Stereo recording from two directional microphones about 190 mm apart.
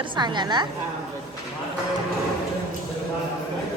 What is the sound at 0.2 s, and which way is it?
Speech, 25° right (ahead or behind).